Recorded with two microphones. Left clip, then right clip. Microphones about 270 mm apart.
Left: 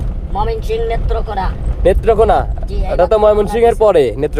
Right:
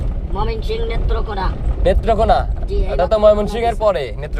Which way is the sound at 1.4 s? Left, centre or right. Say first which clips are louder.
Left 5 dB; centre.